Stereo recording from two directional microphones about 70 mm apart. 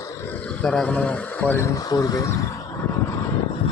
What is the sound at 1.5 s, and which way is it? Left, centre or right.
Speech, left.